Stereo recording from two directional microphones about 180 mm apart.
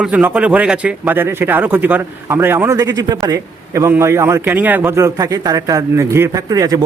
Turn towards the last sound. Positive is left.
turn(degrees=-20)  # may be behind; listen again after turning